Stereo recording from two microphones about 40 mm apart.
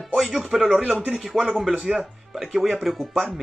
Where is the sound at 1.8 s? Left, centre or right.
Right.